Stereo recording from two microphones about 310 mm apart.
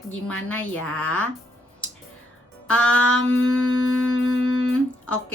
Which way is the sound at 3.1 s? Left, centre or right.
Left.